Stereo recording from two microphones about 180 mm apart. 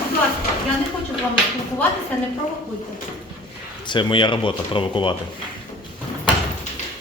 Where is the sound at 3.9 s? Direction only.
25° left (ahead or behind).